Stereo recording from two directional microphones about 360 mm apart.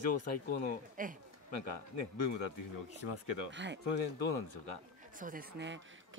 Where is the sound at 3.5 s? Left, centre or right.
Right.